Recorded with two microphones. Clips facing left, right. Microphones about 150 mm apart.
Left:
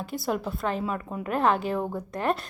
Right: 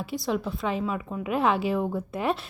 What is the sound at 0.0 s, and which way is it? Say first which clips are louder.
A woman's voice: right 1 dB; centre (ahead or behind).